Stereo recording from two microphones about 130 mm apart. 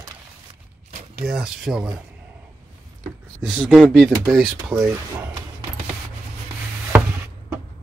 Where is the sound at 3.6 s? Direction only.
5° right (ahead or behind).